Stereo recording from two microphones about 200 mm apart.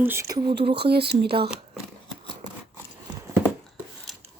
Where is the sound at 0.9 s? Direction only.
55° right (ahead or behind).